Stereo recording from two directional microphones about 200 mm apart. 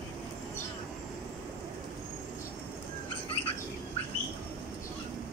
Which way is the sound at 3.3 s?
30° left (ahead or behind).